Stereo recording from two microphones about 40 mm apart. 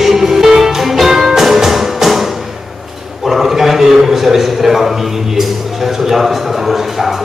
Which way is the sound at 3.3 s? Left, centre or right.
Centre.